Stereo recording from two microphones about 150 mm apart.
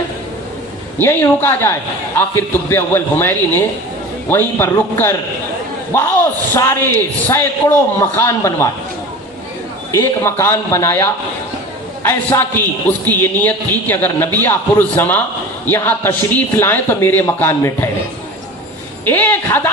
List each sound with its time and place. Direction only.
0.9 s a man's voice: 15° left (ahead or behind)
9.9 s a man's voice: 20° left (ahead or behind)
19.0 s a man's voice: 15° left (ahead or behind)